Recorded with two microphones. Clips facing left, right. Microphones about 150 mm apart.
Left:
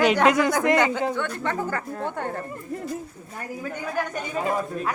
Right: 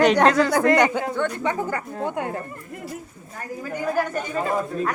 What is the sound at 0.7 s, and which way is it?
Speech, 15° right (ahead or behind).